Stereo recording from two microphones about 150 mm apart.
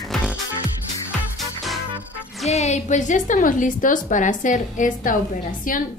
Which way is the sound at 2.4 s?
50° left (ahead or behind).